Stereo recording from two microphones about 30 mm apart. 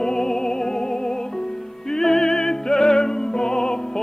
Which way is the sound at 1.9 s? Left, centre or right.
Centre.